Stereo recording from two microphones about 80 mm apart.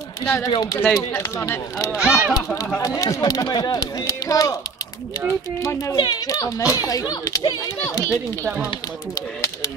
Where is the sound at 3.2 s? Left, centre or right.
Left.